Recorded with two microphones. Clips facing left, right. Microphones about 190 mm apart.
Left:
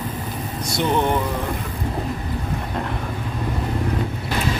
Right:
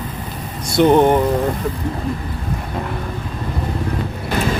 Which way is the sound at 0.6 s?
55° right (ahead or behind).